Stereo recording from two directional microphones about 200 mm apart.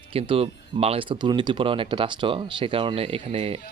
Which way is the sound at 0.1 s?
30° right (ahead or behind).